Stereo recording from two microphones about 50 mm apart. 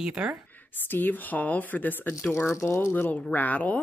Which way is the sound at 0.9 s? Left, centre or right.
Left.